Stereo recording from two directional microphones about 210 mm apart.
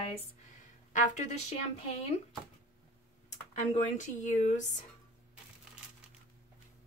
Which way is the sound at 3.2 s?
35° left (ahead or behind).